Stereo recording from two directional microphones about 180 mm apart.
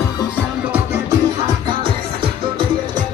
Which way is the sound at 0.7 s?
10° right (ahead or behind).